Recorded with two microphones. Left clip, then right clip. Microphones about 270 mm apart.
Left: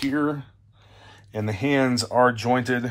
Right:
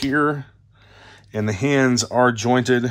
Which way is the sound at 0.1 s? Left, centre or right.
Right.